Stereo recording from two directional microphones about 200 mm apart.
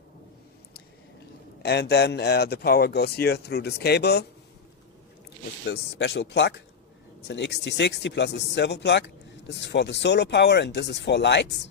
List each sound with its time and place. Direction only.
1.6 s speech: 55° left (ahead or behind)
5.7 s speech: 55° left (ahead or behind)